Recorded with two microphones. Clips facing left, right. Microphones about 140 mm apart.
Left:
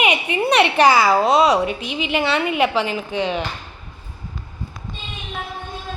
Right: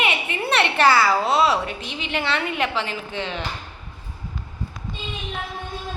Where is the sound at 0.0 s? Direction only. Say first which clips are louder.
Left 5 dB; 15° left (ahead or behind).